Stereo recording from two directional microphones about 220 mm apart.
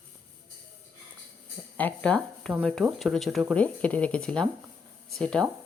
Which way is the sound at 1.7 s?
5° left (ahead or behind).